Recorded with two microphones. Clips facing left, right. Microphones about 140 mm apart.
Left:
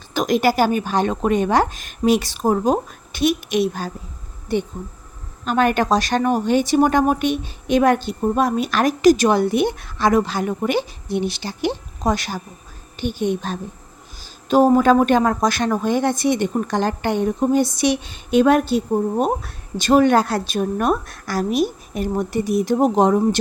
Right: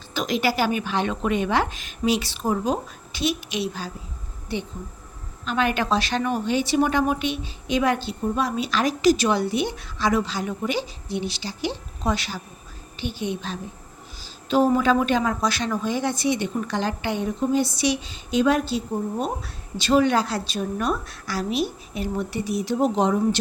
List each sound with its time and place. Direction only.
0.1 s speech: 50° left (ahead or behind)